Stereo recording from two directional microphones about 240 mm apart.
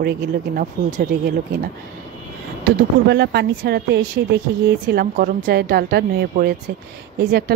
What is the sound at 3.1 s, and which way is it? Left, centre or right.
A woman's voice, right.